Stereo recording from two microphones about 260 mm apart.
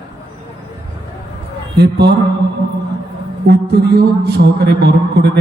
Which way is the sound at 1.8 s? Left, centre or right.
Right.